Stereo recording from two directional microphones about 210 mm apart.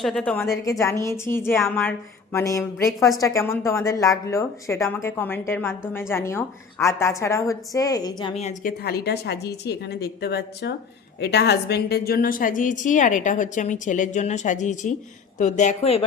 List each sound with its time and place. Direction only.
0.0 s a woman's voice: 5° left (ahead or behind)
8.4 s a woman's voice: 35° left (ahead or behind)
8.8 s a woman's voice: 50° left (ahead or behind); by 16.0 s 30° left (ahead or behind)